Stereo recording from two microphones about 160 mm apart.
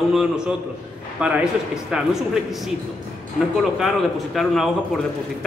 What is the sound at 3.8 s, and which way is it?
Speech, centre (ahead or behind).